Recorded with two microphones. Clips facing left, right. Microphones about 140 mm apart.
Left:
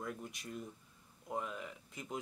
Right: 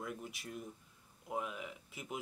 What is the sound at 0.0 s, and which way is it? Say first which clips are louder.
Speech: even; 5° right (ahead or behind).